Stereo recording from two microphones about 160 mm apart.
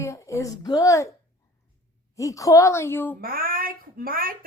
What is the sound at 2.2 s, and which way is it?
Speech, 20° left (ahead or behind).